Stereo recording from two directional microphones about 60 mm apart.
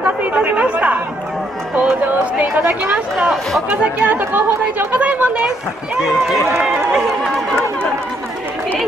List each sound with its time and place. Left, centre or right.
0.0 s chatter: right
2.3 s speech: right
6.6 s run: centre